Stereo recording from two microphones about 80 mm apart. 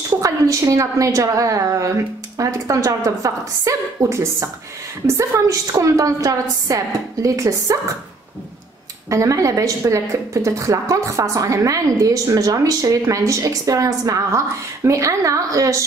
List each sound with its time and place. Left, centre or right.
0.2 s a woman's voice: right
9.1 s a woman's voice: right